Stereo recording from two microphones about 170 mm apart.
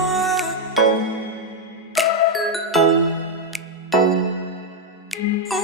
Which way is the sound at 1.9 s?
Centre (ahead or behind).